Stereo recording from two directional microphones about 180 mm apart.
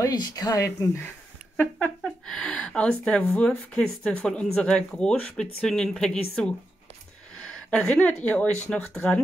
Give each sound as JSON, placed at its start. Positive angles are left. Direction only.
{"t": 0.0, "sound": "speech", "side_deg": 20}
{"t": 7.4, "sound": "speech", "side_deg": 5}